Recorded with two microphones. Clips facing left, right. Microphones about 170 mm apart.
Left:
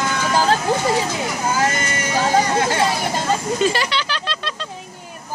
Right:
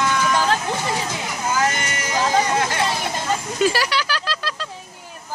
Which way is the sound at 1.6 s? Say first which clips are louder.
Left 2 dB; 35° left (ahead or behind).